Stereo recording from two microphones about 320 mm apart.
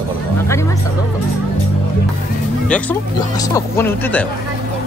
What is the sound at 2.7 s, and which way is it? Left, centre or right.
Speech, centre.